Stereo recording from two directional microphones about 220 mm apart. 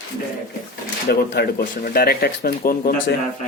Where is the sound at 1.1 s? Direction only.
45° left (ahead or behind).